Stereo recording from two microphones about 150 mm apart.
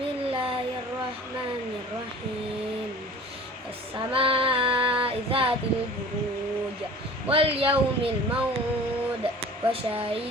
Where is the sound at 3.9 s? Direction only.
35° right (ahead or behind).